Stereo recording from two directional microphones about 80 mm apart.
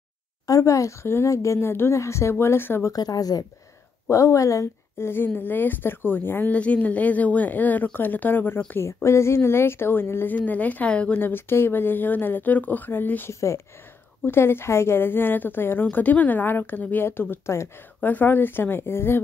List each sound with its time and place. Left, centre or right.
0.5 s a woman's voice: left
2.9 s a woman's voice: left
4.1 s a woman's voice: left
8.8 s a woman's voice: left; by 11.1 s centre
11.1 s a woman's voice: left
13.3 s a woman's voice: left